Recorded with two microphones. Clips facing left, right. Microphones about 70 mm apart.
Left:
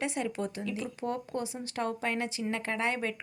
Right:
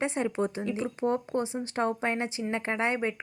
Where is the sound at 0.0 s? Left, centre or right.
Right.